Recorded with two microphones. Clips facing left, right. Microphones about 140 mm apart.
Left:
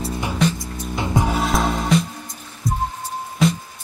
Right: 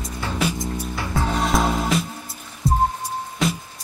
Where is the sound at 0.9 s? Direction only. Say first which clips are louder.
Left 6 dB; 20° left (ahead or behind).